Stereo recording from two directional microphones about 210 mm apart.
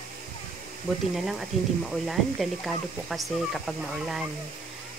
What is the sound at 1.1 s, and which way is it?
Speech, centre (ahead or behind).